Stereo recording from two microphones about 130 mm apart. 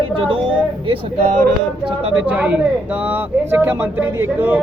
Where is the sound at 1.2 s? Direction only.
65° right (ahead or behind).